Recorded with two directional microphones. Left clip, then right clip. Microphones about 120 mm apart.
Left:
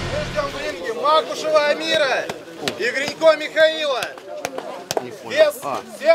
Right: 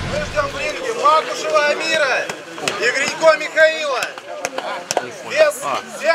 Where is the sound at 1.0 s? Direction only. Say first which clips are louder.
Right 3 dB; 15° right (ahead or behind).